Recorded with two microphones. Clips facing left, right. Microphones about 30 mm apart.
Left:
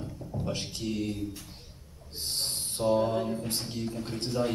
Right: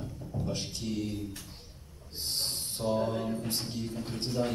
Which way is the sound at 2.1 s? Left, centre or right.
Centre.